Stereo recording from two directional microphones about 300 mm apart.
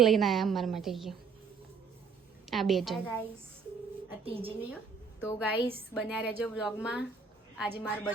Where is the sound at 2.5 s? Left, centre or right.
Centre.